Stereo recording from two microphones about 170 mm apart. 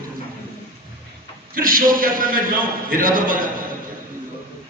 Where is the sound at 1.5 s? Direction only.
55° right (ahead or behind).